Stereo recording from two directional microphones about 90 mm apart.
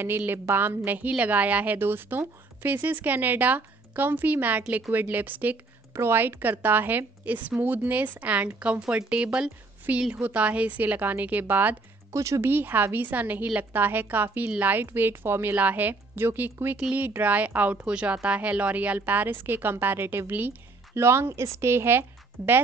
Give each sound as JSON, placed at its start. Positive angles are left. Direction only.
{"t": 0.2, "sound": "a woman's voice", "side_deg": -25}
{"t": 12.1, "sound": "speech", "side_deg": -35}
{"t": 12.4, "sound": "a woman's voice", "side_deg": -20}